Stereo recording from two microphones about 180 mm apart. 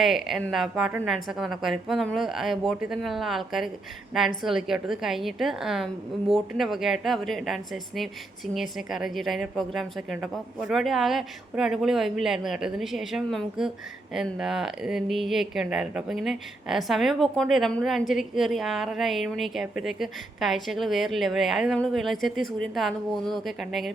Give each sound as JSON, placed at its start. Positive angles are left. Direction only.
{"t": 0.0, "sound": "speech", "side_deg": 0}